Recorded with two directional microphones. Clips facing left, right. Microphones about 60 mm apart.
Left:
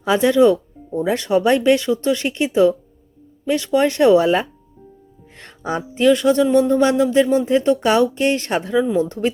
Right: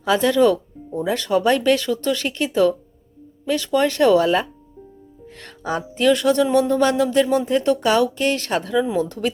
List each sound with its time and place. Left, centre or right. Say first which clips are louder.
0.0 s speech: left 2 dB; centre
0.9 s speech: left 2 dB; left
5.2 s music: left 1 dB; left
5.9 s speech: left 3 dB; centre
7.8 s speech: left 2 dB; left